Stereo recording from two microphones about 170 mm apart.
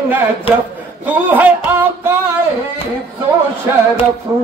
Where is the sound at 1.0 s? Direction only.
10° right (ahead or behind).